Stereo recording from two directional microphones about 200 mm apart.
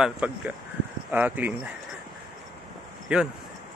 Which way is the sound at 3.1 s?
5° right (ahead or behind).